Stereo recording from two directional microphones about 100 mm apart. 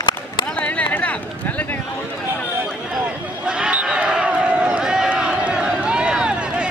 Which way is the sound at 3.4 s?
10° right (ahead or behind).